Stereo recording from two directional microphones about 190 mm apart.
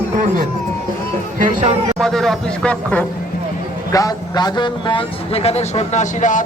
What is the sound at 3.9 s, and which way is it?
A man's voice, 20° left (ahead or behind).